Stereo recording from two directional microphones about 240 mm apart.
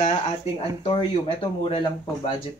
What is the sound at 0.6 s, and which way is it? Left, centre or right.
Speech, left.